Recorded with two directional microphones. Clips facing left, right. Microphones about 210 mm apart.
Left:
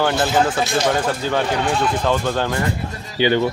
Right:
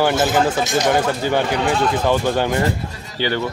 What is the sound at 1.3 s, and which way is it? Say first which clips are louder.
Speech: right 1 dB; 10° right (ahead or behind).